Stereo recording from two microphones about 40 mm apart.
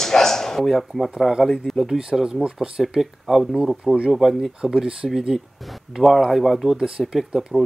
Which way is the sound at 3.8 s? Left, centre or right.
Right.